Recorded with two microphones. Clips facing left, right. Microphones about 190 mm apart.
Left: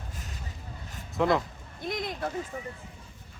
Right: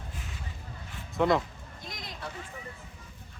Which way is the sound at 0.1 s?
40° left (ahead or behind).